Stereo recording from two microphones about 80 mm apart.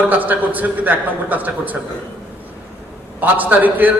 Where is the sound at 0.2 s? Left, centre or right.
Right.